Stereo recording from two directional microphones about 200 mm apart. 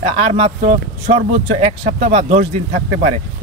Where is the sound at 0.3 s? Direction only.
30° right (ahead or behind).